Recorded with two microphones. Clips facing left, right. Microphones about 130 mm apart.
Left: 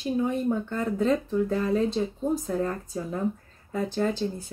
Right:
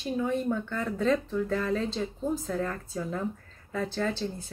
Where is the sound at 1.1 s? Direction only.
30° left (ahead or behind).